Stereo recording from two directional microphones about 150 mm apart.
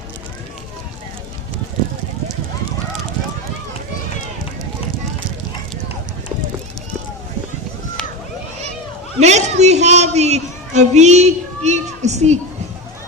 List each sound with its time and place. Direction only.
9.2 s a woman's voice: 50° right (ahead or behind)